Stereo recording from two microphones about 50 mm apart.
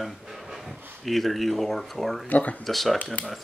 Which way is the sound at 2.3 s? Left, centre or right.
Left.